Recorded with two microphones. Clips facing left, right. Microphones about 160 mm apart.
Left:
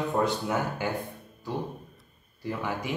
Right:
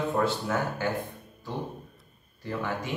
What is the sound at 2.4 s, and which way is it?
Speech, 10° left (ahead or behind).